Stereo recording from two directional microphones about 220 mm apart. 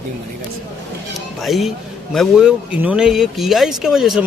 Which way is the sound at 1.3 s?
Centre (ahead or behind).